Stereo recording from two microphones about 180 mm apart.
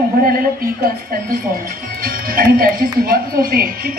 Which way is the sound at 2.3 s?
55° right (ahead or behind).